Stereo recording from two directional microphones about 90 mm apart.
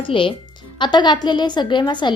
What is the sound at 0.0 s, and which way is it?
Speech, 75° left (ahead or behind).